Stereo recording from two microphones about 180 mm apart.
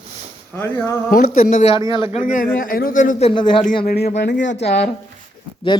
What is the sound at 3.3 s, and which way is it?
Speech, 30° left (ahead or behind).